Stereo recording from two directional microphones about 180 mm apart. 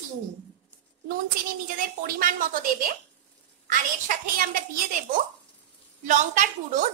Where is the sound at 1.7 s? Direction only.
50° right (ahead or behind).